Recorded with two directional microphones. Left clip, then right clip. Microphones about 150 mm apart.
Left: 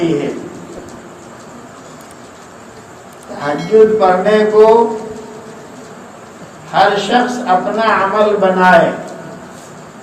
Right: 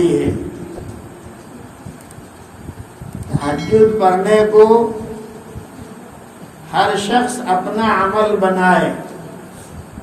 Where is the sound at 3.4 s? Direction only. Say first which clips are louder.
Left 3 dB; centre (ahead or behind).